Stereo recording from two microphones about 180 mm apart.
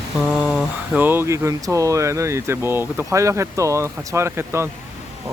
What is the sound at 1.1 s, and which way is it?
Speech, 15° right (ahead or behind).